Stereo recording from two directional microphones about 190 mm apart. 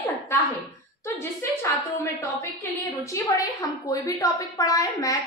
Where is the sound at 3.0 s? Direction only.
15° left (ahead or behind).